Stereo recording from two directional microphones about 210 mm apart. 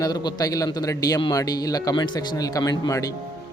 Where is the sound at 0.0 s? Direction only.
20° left (ahead or behind).